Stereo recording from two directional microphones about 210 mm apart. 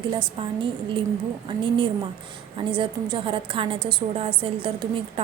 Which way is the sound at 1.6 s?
20° right (ahead or behind).